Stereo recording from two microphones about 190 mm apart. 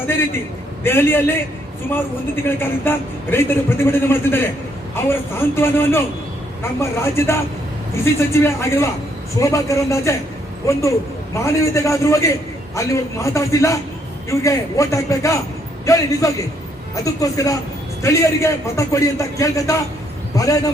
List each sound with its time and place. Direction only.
0.9 s a woman's voice: 10° left (ahead or behind)